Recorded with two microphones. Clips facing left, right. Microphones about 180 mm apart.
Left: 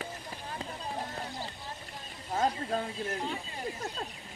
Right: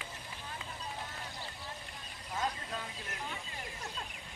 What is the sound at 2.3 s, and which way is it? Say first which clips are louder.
Speech: left 8 dB; 45° left (ahead or behind).